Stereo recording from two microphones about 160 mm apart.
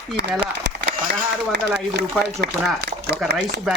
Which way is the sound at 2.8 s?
90° right.